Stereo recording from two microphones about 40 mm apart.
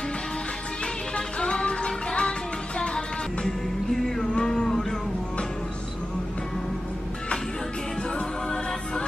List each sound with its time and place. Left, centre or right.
1.1 s music: left
3.4 s music: centre